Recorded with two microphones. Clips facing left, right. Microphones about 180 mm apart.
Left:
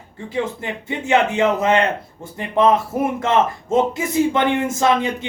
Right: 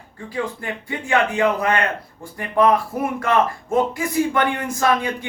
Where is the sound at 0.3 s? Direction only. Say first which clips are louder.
Left 2 dB; 25° left (ahead or behind).